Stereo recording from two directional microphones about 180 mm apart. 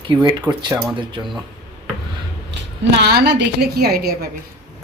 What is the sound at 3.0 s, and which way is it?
A woman's voice, 65° right (ahead or behind).